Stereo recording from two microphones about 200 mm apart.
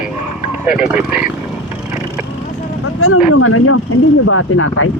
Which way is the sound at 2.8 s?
90° left.